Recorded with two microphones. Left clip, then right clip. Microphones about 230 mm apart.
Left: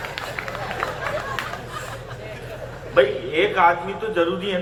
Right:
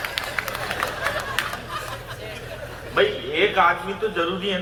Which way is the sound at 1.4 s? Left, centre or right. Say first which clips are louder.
Right 3 dB; right.